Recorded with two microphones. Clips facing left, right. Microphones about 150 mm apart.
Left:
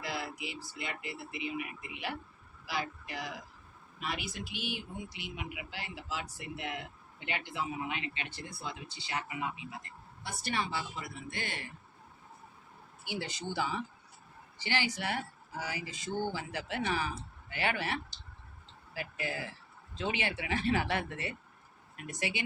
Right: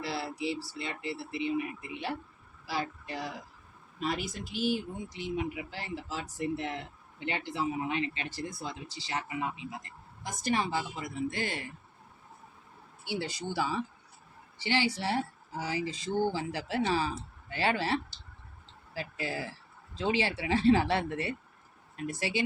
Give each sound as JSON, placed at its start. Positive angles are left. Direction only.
{"t": 0.0, "sound": "speech", "side_deg": -35}
{"t": 13.2, "sound": "speech", "side_deg": 20}
{"t": 14.6, "sound": "speech", "side_deg": -20}
{"t": 22.2, "sound": "speech", "side_deg": 20}